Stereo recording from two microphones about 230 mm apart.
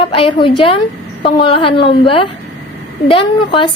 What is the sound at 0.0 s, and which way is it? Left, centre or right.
A woman's voice, left.